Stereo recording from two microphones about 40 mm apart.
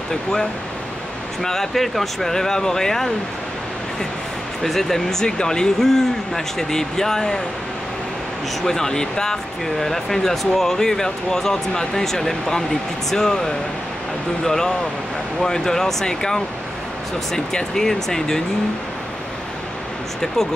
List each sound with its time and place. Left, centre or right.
0.1 s speech: centre
4.6 s speech: centre
8.6 s speech: centre